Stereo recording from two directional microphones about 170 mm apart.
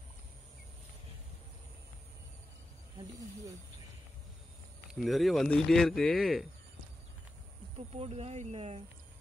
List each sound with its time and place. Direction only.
4.9 s speech: centre (ahead or behind)
7.7 s speech: 40° right (ahead or behind)